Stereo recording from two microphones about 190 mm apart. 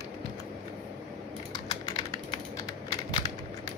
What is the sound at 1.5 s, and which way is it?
Typing, 20° left (ahead or behind).